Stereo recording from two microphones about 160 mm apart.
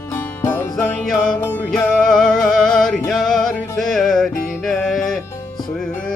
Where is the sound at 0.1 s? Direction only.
10° left (ahead or behind).